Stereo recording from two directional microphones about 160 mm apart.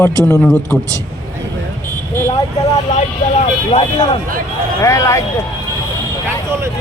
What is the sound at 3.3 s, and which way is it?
Speech, 35° left (ahead or behind).